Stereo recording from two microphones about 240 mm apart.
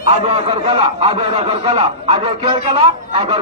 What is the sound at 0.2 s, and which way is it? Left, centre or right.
A man's voice, right.